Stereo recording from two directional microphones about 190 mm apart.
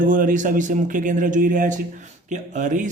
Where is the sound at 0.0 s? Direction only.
45° right (ahead or behind).